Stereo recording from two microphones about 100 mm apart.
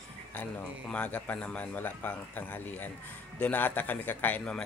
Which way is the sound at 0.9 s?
15° left (ahead or behind).